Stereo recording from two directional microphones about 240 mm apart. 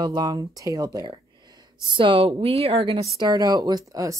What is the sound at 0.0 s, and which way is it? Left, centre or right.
Speech, centre.